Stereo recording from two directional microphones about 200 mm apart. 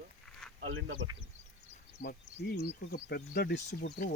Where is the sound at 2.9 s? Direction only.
55° left (ahead or behind).